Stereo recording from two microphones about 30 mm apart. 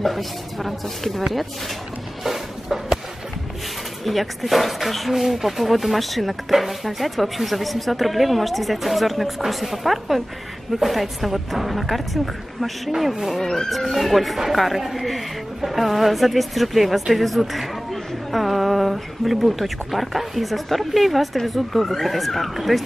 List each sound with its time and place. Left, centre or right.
0.0 s speech: centre
2.2 s a sound: centre
4.0 s speech: centre
13.4 s speech: centre
13.7 s speech: centre